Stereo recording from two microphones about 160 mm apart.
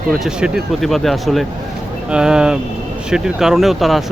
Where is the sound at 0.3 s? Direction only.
5° right (ahead or behind).